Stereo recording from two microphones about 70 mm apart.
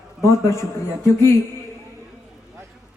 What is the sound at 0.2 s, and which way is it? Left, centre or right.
Speech, left.